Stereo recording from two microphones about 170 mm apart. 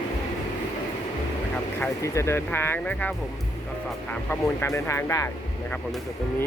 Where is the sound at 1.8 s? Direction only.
15° left (ahead or behind).